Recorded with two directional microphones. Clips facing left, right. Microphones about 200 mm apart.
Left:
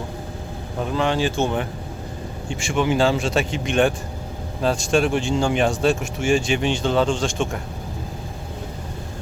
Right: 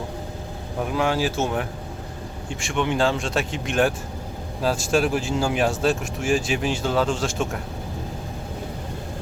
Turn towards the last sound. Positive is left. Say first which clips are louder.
# left 2 dB
turn(degrees=-5)  # may be behind; listen again after turning